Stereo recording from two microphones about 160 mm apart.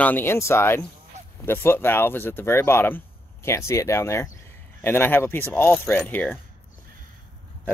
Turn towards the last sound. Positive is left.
turn(degrees=10)  # may be behind; listen again after turning